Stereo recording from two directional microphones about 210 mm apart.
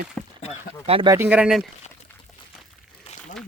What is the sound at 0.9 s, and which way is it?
Speech, 25° right (ahead or behind).